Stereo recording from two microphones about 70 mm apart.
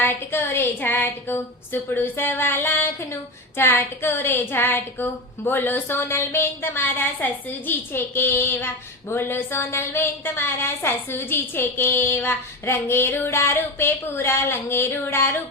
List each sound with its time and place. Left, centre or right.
0.0 s female singing: left